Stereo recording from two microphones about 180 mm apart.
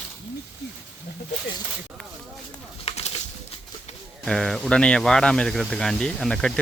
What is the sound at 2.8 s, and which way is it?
Bird, 35° left (ahead or behind).